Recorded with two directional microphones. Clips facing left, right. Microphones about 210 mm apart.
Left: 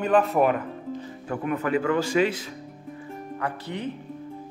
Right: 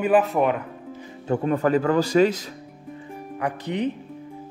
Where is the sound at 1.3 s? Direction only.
35° right (ahead or behind).